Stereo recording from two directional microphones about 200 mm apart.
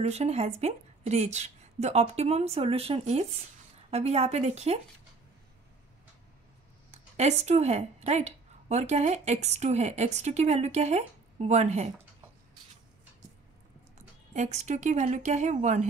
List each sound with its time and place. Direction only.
0.0 s a woman's voice: 35° right (ahead or behind)
6.9 s speech: 35° right (ahead or behind)
13.9 s speech: 35° right (ahead or behind)